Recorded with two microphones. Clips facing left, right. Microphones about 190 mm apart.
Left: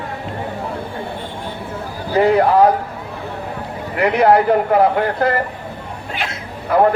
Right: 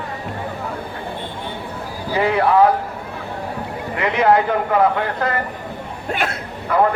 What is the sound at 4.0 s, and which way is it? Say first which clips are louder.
Speech: left 3 dB; 35° left (ahead or behind).